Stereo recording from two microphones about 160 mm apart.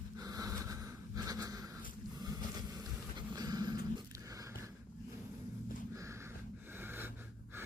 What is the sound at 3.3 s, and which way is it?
Dog, 25° right (ahead or behind).